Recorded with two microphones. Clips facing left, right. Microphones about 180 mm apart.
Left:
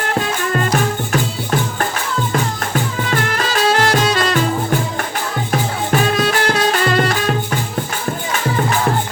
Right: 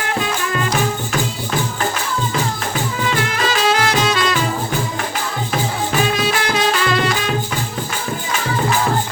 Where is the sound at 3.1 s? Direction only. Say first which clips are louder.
Left 2 dB; 45° left (ahead or behind).